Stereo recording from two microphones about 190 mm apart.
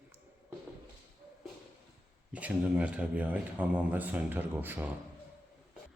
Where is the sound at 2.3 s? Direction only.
5° right (ahead or behind).